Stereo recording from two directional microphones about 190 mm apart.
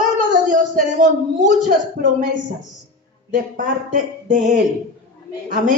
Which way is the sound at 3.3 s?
45° right (ahead or behind).